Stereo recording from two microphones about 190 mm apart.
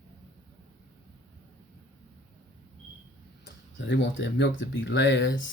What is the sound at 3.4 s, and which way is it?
Speech, 70° left (ahead or behind).